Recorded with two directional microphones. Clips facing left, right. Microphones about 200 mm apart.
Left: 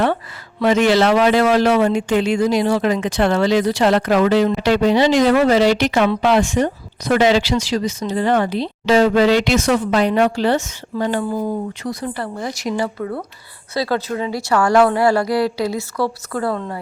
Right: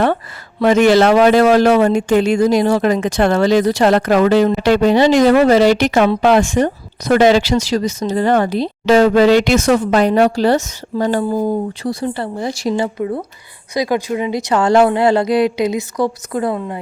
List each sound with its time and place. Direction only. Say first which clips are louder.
0.6 s a man's voice: right 4 dB; 50° right (ahead or behind); by 16.8 s 15° right (ahead or behind)